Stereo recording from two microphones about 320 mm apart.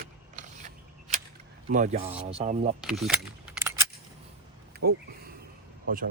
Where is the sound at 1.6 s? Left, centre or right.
Right.